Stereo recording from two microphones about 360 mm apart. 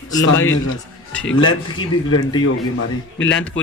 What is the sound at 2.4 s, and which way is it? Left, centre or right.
A man's voice, left.